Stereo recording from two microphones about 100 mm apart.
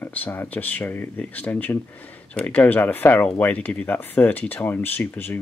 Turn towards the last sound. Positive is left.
turn(degrees=20)  # may be behind; listen again after turning